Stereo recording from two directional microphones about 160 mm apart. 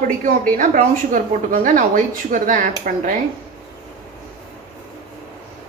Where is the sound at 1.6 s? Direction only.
55° right (ahead or behind).